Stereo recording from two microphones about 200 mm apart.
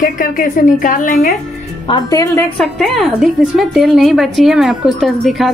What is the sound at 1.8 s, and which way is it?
Speech, 20° left (ahead or behind).